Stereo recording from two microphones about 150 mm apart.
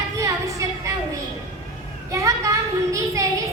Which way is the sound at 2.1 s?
20° right (ahead or behind).